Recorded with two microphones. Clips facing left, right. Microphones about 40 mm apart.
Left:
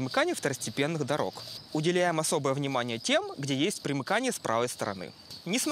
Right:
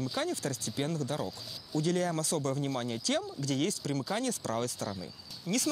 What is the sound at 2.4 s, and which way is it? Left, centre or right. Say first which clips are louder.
Speech: left 4 dB; left.